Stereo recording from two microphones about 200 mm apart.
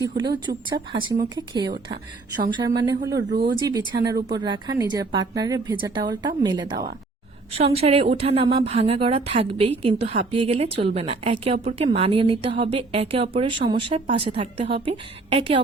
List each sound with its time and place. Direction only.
0.2 s speech: 20° right (ahead or behind)
3.3 s speech: 50° right (ahead or behind)
3.7 s speech: 20° right (ahead or behind)